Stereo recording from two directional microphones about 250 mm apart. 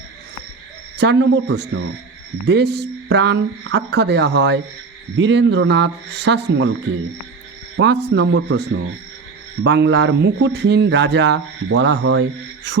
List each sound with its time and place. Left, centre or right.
0.9 s speech: right
7.8 s speech: right